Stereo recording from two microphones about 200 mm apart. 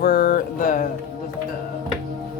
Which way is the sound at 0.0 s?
45° left (ahead or behind).